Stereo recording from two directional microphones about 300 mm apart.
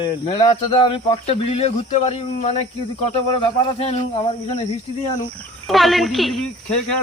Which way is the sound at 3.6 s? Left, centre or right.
Centre.